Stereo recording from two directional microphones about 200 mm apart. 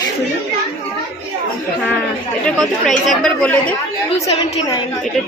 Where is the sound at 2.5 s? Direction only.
5° left (ahead or behind).